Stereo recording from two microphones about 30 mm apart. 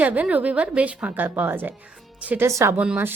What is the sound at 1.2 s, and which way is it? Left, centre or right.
Speech, right.